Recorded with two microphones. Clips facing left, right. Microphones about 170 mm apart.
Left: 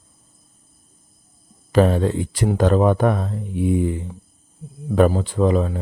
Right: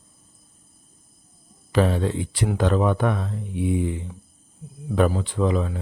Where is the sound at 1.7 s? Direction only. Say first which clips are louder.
Left 5 dB; 45° left (ahead or behind).